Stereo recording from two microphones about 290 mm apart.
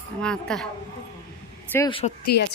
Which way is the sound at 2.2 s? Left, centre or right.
Left.